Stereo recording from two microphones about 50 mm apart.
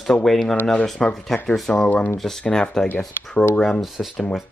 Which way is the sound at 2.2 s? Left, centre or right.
Centre.